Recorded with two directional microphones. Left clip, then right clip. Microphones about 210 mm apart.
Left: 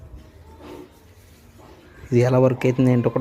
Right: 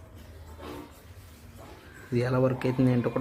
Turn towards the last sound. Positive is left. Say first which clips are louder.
# left 7 dB
turn(degrees=15)  # may be behind; listen again after turning